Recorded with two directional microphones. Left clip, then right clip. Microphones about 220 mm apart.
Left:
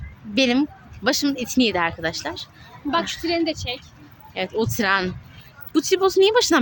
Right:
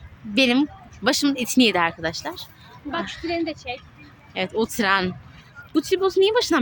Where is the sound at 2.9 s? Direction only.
50° left (ahead or behind).